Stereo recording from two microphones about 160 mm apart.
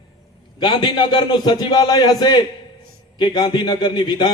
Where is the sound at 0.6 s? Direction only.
30° left (ahead or behind).